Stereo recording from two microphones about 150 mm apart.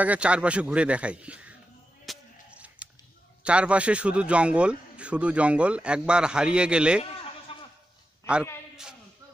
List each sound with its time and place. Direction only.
0.0 s a man's voice: 10° right (ahead or behind)
2.0 s a sound: 10° right (ahead or behind)
3.4 s a man's voice: 5° right (ahead or behind)
7.5 s goat: 40° left (ahead or behind)